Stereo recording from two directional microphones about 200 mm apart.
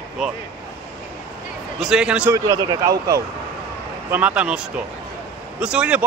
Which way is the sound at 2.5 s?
20° right (ahead or behind).